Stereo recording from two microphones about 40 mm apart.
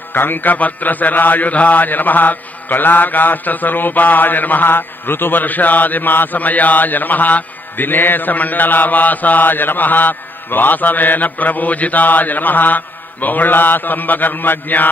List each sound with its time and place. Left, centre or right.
0.1 s mantra: left
5.4 s mantra: left